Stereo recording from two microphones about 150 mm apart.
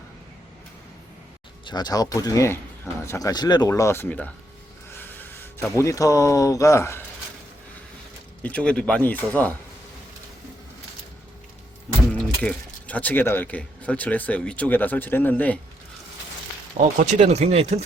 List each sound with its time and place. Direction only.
1.6 s speech: 30° left (ahead or behind); by 4.3 s 10° left (ahead or behind)
4.9 s gasp: 15° left (ahead or behind)
5.7 s speech: 20° left (ahead or behind)
8.4 s speech: 10° left (ahead or behind)
12.4 s speech: 10° left (ahead or behind)
16.8 s speech: 45° right (ahead or behind)